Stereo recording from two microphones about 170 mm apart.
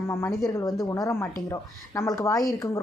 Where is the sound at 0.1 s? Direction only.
15° left (ahead or behind).